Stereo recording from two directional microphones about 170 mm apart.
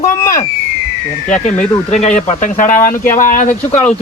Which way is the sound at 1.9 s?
45° left (ahead or behind).